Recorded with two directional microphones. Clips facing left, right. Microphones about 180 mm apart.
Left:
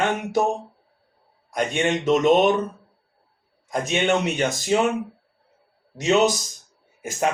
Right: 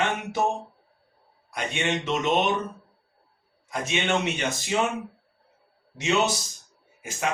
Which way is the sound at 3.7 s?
45° left (ahead or behind).